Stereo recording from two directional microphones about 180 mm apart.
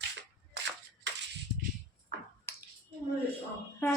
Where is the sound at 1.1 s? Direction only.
80° right.